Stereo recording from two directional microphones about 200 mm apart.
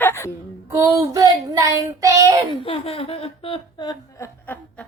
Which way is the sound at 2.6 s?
30° left (ahead or behind).